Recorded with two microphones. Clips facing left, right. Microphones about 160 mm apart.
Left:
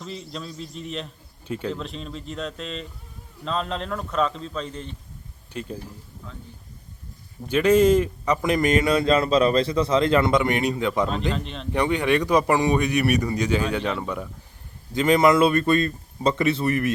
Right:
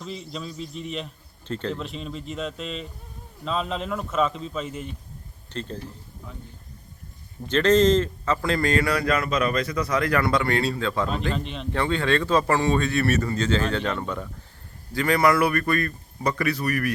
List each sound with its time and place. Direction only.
0.0 s a man's voice: centre (ahead or behind)
5.5 s a man's voice: 10° left (ahead or behind)
7.4 s a man's voice: 10° left (ahead or behind)
11.3 s a man's voice: centre (ahead or behind)
11.7 s a man's voice: 15° left (ahead or behind)
14.9 s a man's voice: 20° left (ahead or behind)